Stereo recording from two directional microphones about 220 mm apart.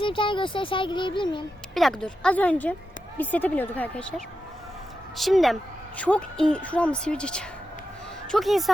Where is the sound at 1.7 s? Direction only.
Centre (ahead or behind).